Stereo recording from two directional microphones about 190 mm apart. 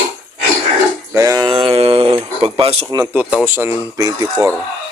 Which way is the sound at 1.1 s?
15° right (ahead or behind).